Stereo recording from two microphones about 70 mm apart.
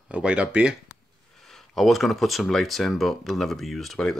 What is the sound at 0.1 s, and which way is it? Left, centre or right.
Speech, centre.